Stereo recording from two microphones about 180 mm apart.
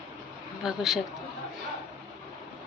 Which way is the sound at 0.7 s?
Centre (ahead or behind).